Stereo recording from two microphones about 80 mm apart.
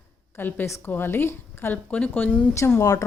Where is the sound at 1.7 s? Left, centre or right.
Centre.